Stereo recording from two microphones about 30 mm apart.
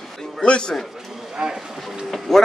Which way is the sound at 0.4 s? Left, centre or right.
Left.